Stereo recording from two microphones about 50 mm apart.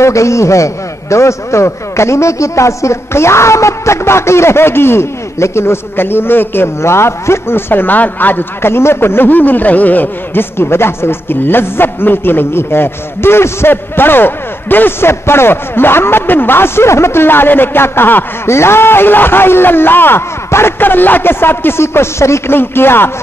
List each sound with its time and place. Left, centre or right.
0.0 s a man's voice: left
1.1 s a man's voice: left
6.8 s speech: left
18.5 s speech: left
22.6 s speech: left